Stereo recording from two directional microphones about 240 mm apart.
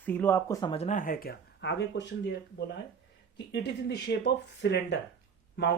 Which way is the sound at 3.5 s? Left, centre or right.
Left.